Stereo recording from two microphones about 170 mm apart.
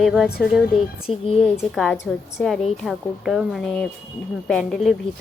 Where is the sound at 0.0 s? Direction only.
5° right (ahead or behind).